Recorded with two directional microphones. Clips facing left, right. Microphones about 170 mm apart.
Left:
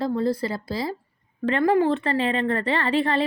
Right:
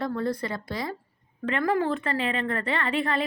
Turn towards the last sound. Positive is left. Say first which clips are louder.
# left 4 dB
turn(degrees=30)  # may be behind; listen again after turning